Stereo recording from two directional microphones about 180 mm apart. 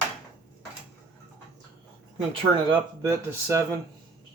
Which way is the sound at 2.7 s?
15° right (ahead or behind).